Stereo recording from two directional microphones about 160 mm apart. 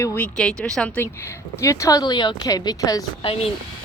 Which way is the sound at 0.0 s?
5° left (ahead or behind).